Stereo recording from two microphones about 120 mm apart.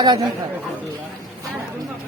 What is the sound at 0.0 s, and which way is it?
Speech, 35° right (ahead or behind).